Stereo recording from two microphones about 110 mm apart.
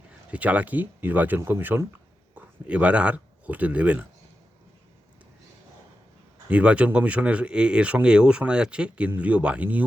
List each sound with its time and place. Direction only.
0.3 s speech: 15° right (ahead or behind)
6.5 s speech: 10° right (ahead or behind)